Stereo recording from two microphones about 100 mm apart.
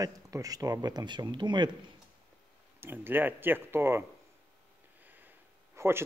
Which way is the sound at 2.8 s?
20° right (ahead or behind).